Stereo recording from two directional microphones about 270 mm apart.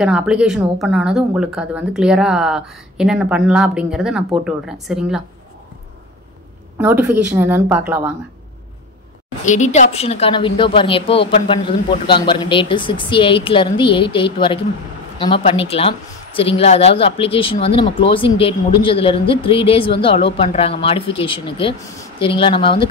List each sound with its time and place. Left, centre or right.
0.0 s speech: centre
6.8 s speech: centre
9.4 s a woman's voice: left